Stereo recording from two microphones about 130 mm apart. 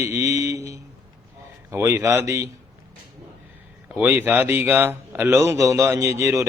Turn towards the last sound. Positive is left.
turn(degrees=-20)  # may be behind; listen again after turning